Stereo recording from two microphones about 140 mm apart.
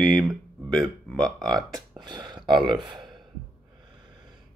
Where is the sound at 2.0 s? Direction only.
30° right (ahead or behind).